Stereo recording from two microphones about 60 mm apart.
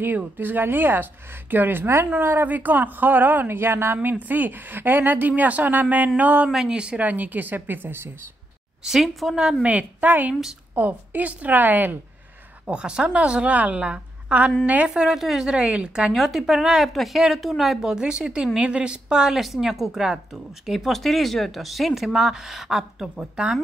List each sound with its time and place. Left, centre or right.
0.2 s speech: right
6.5 s a woman's voice: centre
7.1 s speech: right
8.8 s a woman's voice: centre
9.6 s a woman's voice: right
12.6 s a woman's voice: centre
15.0 s a woman's voice: centre
16.1 s a woman's voice: centre